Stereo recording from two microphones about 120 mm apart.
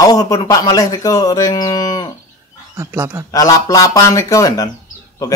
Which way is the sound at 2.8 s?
20° right (ahead or behind).